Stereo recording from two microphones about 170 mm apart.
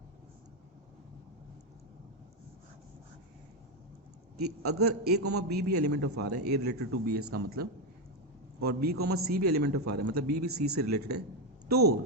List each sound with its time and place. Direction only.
5.0 s a man's voice: 75° right (ahead or behind)